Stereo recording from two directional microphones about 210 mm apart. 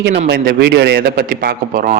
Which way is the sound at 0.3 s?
50° right (ahead or behind).